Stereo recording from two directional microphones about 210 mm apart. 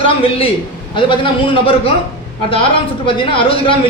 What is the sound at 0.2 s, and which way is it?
Speech, 25° left (ahead or behind).